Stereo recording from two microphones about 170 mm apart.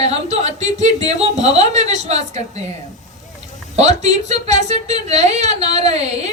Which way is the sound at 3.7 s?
40° right (ahead or behind).